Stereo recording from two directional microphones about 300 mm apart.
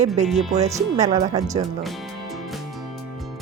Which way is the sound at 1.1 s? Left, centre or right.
Centre.